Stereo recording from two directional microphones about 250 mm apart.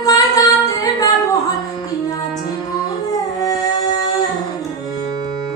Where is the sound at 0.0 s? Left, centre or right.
Centre.